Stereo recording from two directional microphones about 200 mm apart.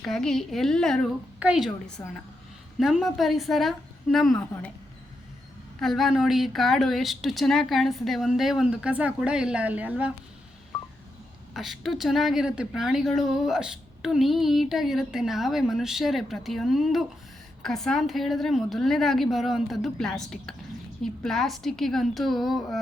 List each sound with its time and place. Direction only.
0.0 s speech: centre (ahead or behind)
5.8 s speech: centre (ahead or behind)
11.5 s speech: centre (ahead or behind)